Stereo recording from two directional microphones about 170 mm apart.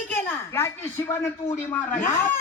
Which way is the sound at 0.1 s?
10° left (ahead or behind).